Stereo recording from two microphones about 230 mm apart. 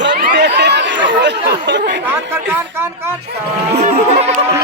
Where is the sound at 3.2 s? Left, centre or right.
Right.